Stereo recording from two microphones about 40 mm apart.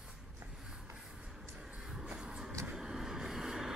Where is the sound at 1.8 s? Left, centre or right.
Centre.